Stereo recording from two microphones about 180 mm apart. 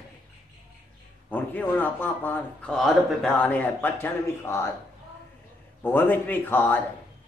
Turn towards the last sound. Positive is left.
turn(degrees=10)  # may be behind; listen again after turning